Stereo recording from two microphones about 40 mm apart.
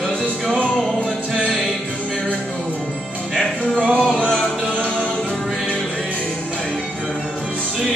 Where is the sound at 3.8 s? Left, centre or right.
Right.